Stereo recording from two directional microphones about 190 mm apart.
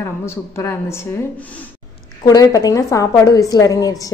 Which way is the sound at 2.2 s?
20° left (ahead or behind).